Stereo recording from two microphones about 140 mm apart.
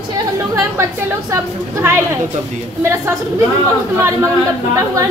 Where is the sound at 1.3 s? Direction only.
20° right (ahead or behind).